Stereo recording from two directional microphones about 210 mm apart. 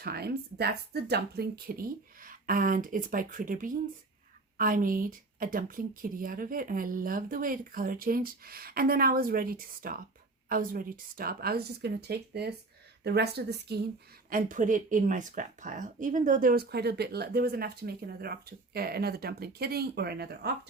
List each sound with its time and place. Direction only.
0.0 s speech: 50° right (ahead or behind)
14.3 s speech: 40° right (ahead or behind)